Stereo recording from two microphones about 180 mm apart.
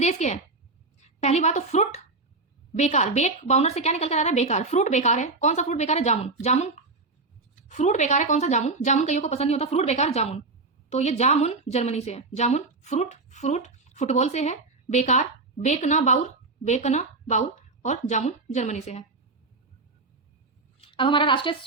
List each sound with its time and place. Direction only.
0.0 s a woman's voice: 40° left (ahead or behind)
7.7 s a woman's voice: 40° left (ahead or behind)
20.8 s a woman's voice: 30° left (ahead or behind)